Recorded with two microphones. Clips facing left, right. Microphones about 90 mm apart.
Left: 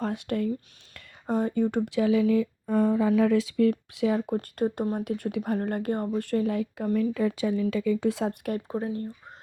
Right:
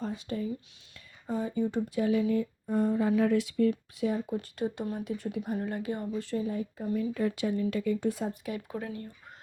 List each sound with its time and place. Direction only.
0.0 s speech: 70° left (ahead or behind); by 4.4 s 90° left
4.4 s speech: 50° left (ahead or behind)
5.0 s speech: 60° left (ahead or behind)
5.5 s speech: 55° left (ahead or behind); by 8.5 s 70° left (ahead or behind)
8.6 s speech: 30° left (ahead or behind)